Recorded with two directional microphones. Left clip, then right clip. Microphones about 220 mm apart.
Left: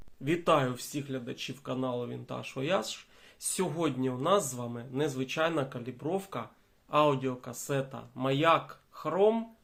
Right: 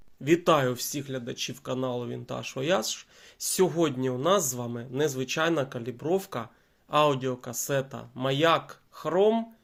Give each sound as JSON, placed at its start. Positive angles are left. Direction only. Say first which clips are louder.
{"t": 0.3, "sound": "speech", "louder": "right 4 dB", "side_deg": -35}